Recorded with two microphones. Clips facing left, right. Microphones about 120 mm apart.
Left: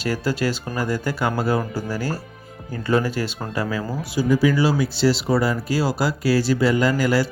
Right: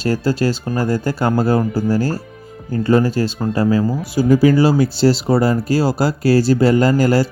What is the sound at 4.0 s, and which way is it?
Speech, 45° right (ahead or behind).